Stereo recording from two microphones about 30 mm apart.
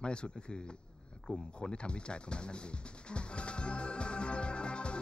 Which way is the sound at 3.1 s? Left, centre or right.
Left.